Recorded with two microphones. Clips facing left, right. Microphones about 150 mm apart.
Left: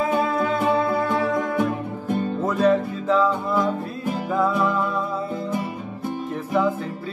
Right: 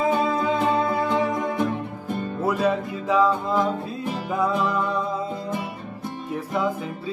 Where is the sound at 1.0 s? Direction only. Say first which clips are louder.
Left 1 dB; 15° right (ahead or behind).